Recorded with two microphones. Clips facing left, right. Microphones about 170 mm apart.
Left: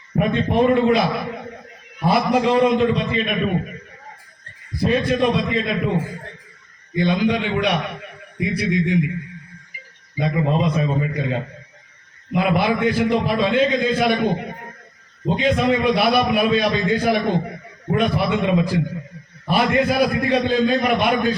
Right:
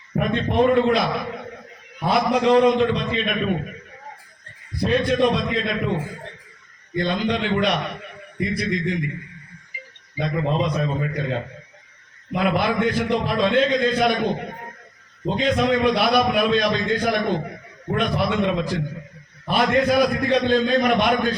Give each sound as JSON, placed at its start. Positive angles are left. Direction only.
{"t": 0.2, "sound": "a man's voice", "side_deg": 0}
{"t": 4.8, "sound": "a man's voice", "side_deg": 0}
{"t": 10.2, "sound": "a man's voice", "side_deg": 5}